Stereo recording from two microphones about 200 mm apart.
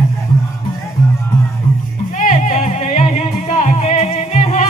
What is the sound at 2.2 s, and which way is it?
Music, 40° left (ahead or behind).